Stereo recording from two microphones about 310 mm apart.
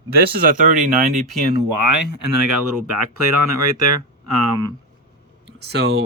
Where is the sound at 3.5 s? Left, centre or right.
Right.